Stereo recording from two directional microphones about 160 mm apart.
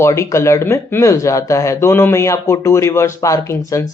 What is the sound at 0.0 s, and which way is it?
Speech, 20° left (ahead or behind).